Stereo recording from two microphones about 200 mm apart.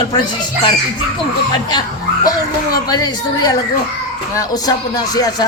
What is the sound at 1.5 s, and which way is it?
Speech, 20° left (ahead or behind).